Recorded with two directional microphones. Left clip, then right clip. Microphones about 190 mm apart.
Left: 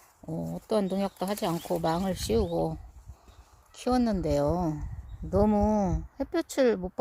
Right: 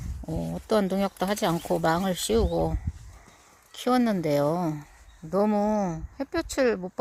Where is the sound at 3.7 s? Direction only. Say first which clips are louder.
Right 3 dB; 5° left (ahead or behind).